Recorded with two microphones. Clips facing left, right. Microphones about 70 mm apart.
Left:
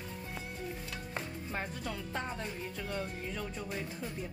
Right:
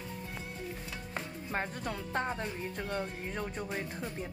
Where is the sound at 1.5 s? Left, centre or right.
Right.